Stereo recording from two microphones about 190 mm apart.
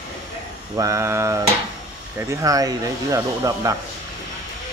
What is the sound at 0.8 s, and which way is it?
Speech, 15° right (ahead or behind).